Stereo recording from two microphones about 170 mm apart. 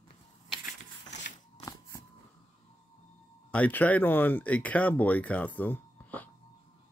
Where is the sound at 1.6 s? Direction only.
20° left (ahead or behind).